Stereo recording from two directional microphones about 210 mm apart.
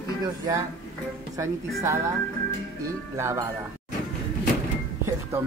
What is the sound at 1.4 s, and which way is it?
Speech, 15° right (ahead or behind).